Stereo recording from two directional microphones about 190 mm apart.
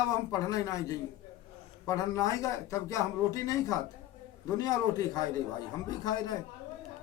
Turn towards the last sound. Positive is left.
turn(degrees=20)  # may be behind; listen again after turning